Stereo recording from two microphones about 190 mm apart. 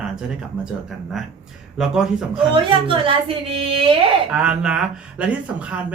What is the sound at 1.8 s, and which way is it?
Speech, 5° right (ahead or behind).